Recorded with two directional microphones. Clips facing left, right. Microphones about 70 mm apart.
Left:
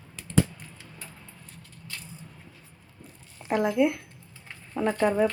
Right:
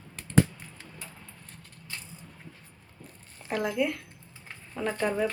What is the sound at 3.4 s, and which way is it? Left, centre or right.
Speech, left.